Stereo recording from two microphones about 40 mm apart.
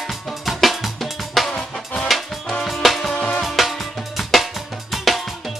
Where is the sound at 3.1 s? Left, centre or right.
Left.